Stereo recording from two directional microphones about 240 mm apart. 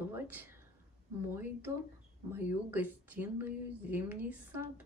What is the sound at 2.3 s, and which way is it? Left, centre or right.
Speech, centre.